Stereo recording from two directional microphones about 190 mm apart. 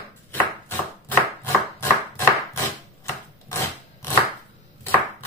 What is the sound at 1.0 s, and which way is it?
Chopping, 15° left (ahead or behind).